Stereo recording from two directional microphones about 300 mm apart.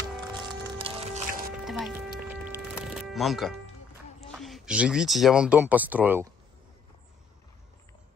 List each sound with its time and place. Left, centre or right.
0.7 s music: centre
1.6 s music: centre
4.3 s speech: centre